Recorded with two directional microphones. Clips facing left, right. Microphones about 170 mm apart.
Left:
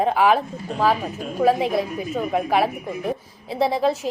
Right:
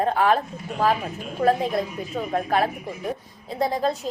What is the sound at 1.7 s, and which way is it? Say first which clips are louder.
A woman's voice: left 3 dB; centre (ahead or behind).